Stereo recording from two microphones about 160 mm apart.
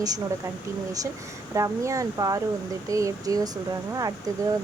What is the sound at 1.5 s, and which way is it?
Speech, 20° right (ahead or behind).